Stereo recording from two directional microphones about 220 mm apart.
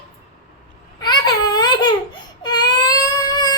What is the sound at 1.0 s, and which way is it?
Baby cry, 20° left (ahead or behind).